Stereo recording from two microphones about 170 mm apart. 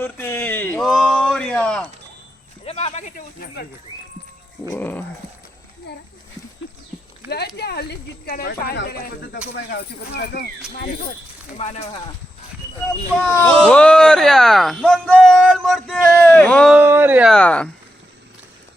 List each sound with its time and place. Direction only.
0.0 s a sound: 10° left (ahead or behind)
2.6 s speech: 40° left (ahead or behind); by 3.7 s 60° left (ahead or behind)
4.7 s dog: 10° left (ahead or behind)
5.9 s speech: 80° left
7.3 s speech: 80° left
11.5 s speech: 40° left (ahead or behind)
13.2 s speech: 10° left (ahead or behind)
16.7 s speech: 10° right (ahead or behind)
17.3 s dog: 5° left (ahead or behind)